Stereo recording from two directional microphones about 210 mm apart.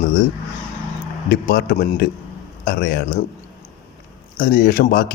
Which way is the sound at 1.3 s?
50° left (ahead or behind).